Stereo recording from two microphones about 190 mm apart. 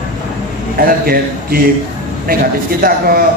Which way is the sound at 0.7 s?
50° right (ahead or behind).